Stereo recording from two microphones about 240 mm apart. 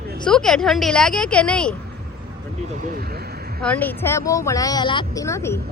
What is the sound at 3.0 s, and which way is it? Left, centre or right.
Speech, right.